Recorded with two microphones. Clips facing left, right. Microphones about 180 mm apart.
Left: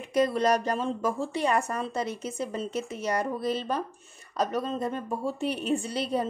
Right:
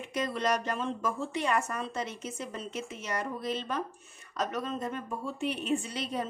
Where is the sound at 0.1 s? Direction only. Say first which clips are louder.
Left 7 dB; 35° left (ahead or behind).